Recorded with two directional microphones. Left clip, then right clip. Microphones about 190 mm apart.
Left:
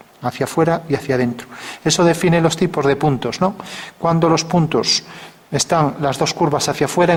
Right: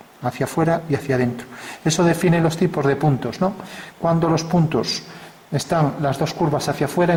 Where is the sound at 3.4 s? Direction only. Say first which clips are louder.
Left 3 dB; 25° right (ahead or behind).